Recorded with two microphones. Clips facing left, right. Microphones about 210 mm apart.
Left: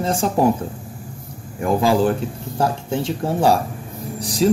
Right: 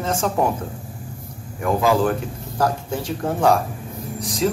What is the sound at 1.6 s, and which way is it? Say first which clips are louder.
A man's voice: left 2 dB; 30° left (ahead or behind).